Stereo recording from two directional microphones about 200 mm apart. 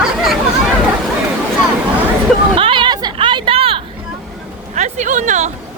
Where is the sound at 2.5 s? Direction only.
25° right (ahead or behind).